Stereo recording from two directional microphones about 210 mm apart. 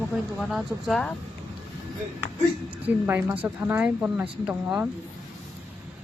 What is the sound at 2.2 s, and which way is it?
A woman's voice, 10° right (ahead or behind).